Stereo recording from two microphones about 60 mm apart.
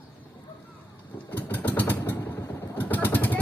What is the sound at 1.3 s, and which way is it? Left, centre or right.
Vehicle, left.